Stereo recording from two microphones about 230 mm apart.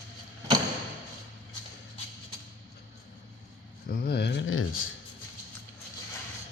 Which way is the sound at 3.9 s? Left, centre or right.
Left.